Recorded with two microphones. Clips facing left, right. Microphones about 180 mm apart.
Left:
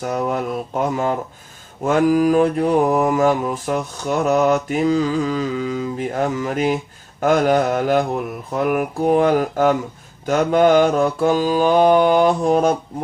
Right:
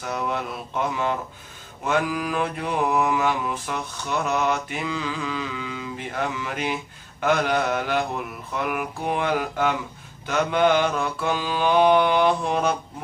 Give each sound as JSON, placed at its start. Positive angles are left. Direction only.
{"t": 0.0, "sound": "mantra", "side_deg": 45}